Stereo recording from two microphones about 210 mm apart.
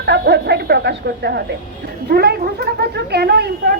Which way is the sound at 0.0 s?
55° right (ahead or behind).